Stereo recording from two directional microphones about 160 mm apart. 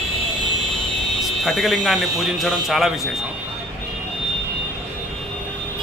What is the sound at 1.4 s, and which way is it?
Speech, centre (ahead or behind).